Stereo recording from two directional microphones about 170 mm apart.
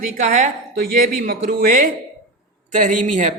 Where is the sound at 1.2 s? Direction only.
50° right (ahead or behind).